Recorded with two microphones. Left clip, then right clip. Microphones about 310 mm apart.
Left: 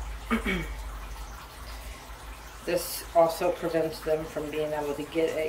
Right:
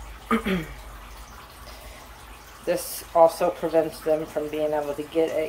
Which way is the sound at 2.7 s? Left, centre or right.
Centre.